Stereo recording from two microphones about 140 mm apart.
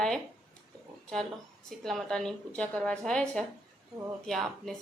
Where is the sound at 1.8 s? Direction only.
Centre (ahead or behind).